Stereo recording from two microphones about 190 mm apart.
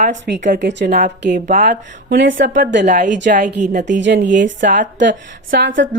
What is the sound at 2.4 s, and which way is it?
Speech, 45° right (ahead or behind).